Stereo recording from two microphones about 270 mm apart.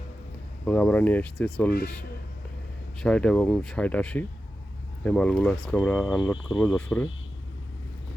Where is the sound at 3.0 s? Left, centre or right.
Centre.